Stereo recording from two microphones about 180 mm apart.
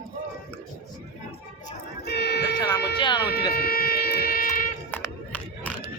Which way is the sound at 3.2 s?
60° left (ahead or behind).